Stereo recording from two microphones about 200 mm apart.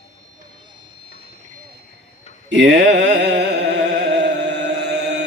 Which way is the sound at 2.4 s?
60° right (ahead or behind).